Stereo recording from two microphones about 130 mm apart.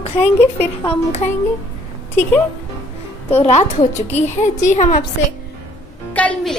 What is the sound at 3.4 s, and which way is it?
A woman's voice, 60° left (ahead or behind).